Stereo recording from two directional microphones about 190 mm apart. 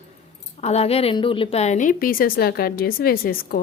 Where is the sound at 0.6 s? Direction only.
35° left (ahead or behind).